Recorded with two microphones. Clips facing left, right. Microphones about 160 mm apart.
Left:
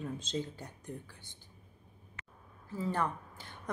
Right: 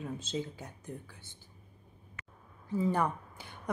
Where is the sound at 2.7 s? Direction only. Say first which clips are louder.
Right 4 dB; 15° right (ahead or behind).